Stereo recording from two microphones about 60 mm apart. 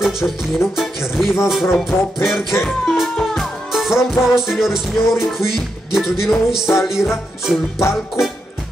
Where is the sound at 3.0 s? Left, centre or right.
Centre.